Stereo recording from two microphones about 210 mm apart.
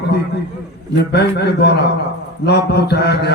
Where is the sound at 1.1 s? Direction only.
50° left (ahead or behind).